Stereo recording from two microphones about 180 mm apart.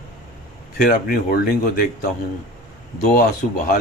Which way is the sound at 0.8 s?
50° left (ahead or behind).